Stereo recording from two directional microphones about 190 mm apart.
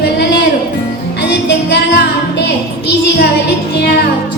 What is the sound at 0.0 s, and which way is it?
Music, 60° left (ahead or behind).